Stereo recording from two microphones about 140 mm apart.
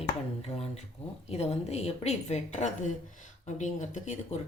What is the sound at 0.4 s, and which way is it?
A woman's voice, 50° left (ahead or behind).